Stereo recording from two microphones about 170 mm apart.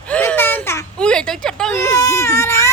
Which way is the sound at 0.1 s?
10° left (ahead or behind).